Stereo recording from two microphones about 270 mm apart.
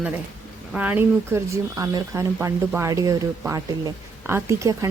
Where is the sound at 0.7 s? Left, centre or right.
Centre.